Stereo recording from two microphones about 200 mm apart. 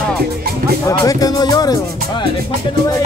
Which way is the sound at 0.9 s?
20° left (ahead or behind).